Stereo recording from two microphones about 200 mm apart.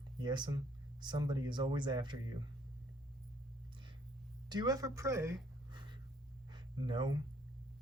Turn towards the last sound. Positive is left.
turn(degrees=-20)  # may be behind; listen again after turning